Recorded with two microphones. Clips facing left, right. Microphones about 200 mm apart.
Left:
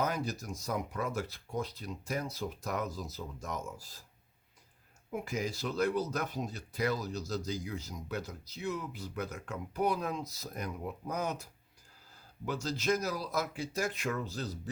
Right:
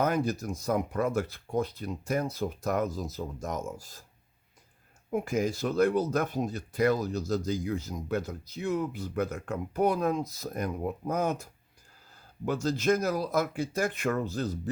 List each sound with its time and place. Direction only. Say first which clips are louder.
0.0 s speech: right 7 dB; 55° right (ahead or behind)
5.1 s speech: right 7 dB; 50° right (ahead or behind)